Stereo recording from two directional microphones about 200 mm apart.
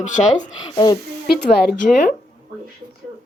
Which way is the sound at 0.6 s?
20° left (ahead or behind).